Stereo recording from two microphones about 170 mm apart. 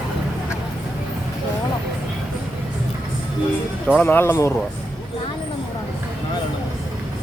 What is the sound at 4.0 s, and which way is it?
Speech, 10° left (ahead or behind).